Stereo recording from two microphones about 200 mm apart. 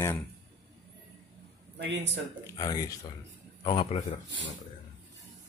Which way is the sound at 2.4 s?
20° left (ahead or behind).